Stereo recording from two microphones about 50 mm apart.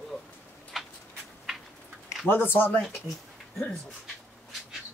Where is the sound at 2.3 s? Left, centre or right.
Left.